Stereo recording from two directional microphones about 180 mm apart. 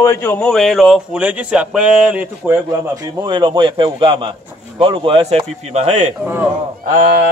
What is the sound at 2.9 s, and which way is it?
A man's voice, 20° right (ahead or behind).